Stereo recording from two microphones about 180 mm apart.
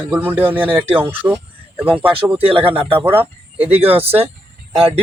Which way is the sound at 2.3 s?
30° right (ahead or behind).